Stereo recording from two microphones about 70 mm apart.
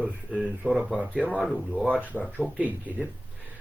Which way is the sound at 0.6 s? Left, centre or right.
Centre.